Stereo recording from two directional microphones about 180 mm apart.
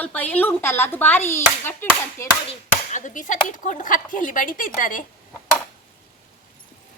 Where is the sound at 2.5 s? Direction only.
45° left (ahead or behind).